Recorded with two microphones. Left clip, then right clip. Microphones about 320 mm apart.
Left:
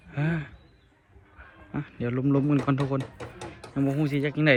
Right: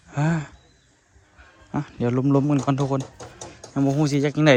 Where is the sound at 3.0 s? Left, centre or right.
Left.